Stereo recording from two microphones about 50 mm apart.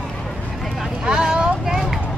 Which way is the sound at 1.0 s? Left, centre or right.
Centre.